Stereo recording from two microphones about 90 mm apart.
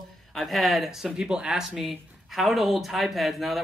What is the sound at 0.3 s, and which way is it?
Speech, centre (ahead or behind).